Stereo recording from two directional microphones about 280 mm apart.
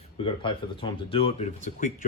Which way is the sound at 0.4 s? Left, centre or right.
Centre.